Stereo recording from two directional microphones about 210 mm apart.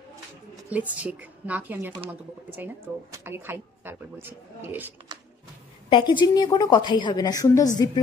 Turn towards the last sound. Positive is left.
turn(degrees=15)  # may be behind; listen again after turning